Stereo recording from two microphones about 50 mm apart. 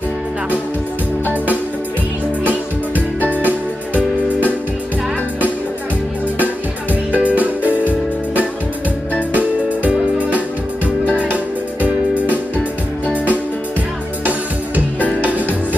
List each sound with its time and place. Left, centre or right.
3.2 s music: left
3.4 s music: right
7.1 s music: right
9.3 s music: right
15.0 s music: left